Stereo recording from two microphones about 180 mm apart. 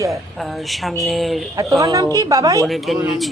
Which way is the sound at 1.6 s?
20° right (ahead or behind).